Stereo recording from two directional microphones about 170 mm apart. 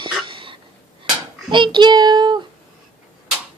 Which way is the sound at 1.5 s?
30° right (ahead or behind).